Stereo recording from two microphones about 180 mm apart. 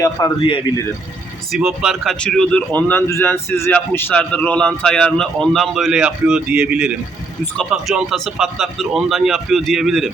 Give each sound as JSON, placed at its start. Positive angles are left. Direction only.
{"t": 0.0, "sound": "a man's voice", "side_deg": 25}
{"t": 1.5, "sound": "speech", "side_deg": -5}